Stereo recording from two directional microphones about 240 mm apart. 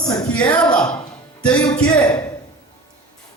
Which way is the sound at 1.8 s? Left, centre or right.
Centre.